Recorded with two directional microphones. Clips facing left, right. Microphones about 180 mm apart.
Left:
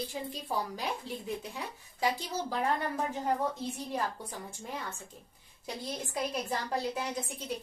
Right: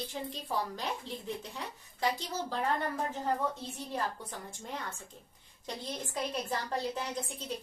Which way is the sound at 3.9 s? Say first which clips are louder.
Right 3 dB; 10° left (ahead or behind).